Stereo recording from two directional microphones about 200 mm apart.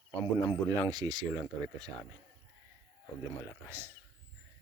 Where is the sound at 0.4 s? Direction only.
20° right (ahead or behind).